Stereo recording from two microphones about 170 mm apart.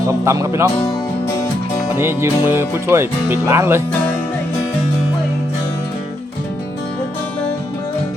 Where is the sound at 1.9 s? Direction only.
15° right (ahead or behind).